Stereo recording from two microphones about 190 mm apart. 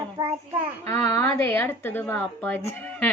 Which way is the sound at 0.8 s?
15° left (ahead or behind).